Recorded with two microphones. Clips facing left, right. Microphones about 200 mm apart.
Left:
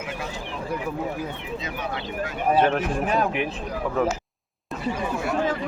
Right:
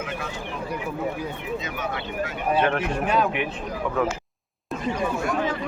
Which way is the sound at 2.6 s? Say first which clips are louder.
Left 1 dB; 40° left (ahead or behind).